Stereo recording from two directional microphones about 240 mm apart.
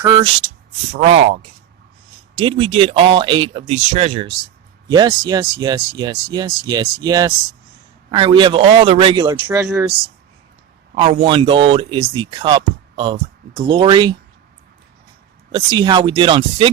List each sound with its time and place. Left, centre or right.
0.0 s speech: centre
1.0 s speech: right; by 9.9 s centre
10.9 s speech: right
15.5 s speech: centre